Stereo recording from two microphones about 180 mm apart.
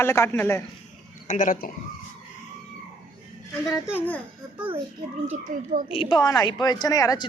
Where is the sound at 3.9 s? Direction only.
10° left (ahead or behind).